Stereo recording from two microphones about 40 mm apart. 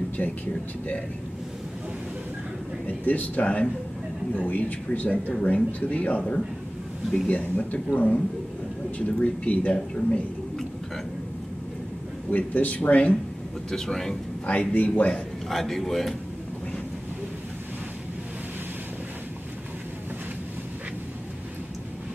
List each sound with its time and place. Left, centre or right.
0.2 s speech: left
3.1 s speech: left
12.3 s speech: left
13.7 s speech: centre
14.4 s speech: left
15.5 s speech: centre